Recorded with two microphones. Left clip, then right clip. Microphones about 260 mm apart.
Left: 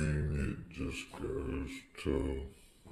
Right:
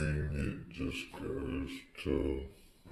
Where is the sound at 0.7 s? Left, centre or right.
Left.